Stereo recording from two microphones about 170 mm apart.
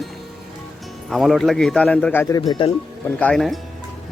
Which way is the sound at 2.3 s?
25° left (ahead or behind).